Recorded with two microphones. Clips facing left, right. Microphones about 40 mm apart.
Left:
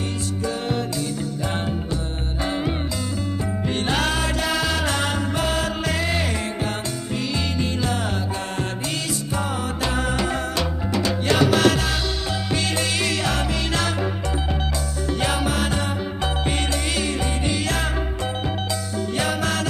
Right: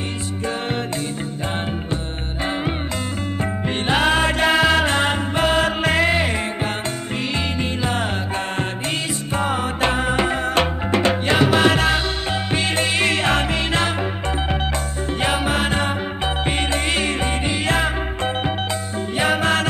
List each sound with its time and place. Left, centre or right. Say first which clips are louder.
3.6 s music: right 4 dB; right
9.3 s music: right 7 dB; right
11.2 s music: left 1 dB; right
15.1 s music: right 3 dB; right